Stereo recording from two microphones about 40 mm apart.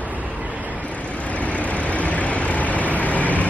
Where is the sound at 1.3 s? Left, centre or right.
Left.